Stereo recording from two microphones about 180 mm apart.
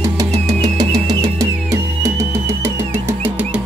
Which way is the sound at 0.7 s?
20° right (ahead or behind).